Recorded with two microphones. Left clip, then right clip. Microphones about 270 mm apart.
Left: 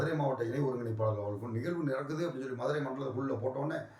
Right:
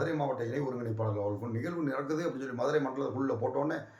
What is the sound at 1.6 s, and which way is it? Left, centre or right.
Speech, centre.